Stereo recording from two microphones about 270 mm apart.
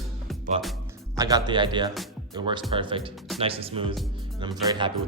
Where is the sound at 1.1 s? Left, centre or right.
Centre.